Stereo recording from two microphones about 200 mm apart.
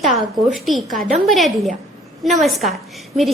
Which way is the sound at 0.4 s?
Centre (ahead or behind).